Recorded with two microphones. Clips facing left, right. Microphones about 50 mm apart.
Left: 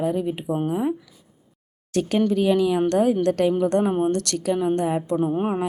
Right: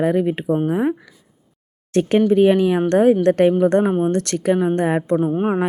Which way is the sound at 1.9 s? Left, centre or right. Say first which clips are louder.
Right 6 dB; right.